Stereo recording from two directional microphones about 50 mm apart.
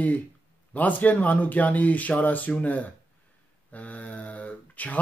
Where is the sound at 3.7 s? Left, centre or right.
Left.